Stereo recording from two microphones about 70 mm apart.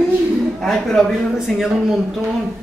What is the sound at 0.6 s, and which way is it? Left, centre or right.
A woman's voice, centre.